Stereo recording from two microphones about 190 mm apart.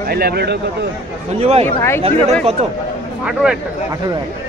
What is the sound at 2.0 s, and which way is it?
Speech, 30° right (ahead or behind).